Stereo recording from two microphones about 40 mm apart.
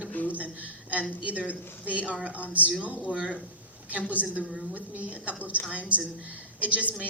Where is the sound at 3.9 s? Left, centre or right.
Right.